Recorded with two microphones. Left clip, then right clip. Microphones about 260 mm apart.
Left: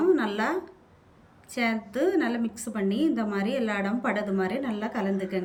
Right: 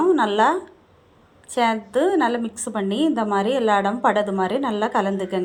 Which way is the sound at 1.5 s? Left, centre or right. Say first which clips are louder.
Right 9 dB; centre.